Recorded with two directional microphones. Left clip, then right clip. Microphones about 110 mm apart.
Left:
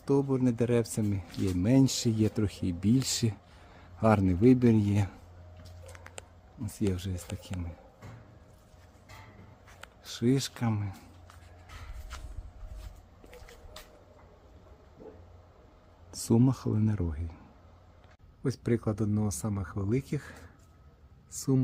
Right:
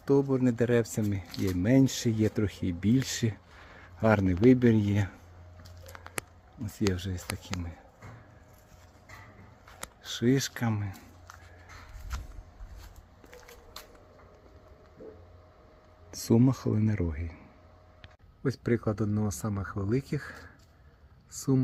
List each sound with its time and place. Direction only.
0.0 s a man's voice: 10° right (ahead or behind); by 5.1 s 15° left (ahead or behind)
6.9 s speech: 10° right (ahead or behind)
10.0 s a sound: 15° right (ahead or behind)
10.2 s speech: 10° right (ahead or behind)
16.1 s a sound: centre (ahead or behind)
16.5 s speech: centre (ahead or behind)
18.4 s speech: centre (ahead or behind)